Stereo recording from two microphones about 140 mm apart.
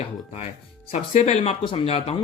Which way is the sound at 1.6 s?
40° left (ahead or behind).